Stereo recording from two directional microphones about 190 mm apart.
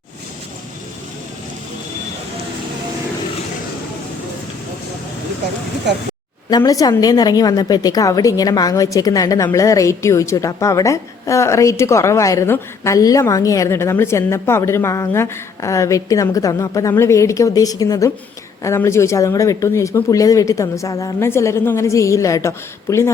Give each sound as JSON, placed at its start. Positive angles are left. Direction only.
{"t": 6.5, "sound": "a woman's voice", "side_deg": 20}